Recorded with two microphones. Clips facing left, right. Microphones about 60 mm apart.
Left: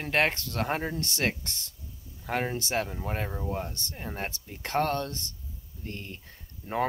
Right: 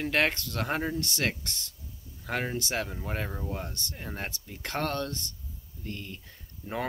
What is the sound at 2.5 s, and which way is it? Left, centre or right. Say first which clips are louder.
Speech: left 2 dB; left.